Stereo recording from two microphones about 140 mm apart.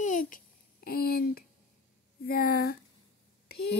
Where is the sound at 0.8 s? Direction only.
90° left.